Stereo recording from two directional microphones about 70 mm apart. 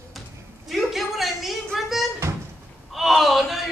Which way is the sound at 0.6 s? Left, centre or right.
Centre.